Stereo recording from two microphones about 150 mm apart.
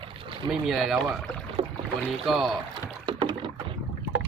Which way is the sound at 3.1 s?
35° right (ahead or behind).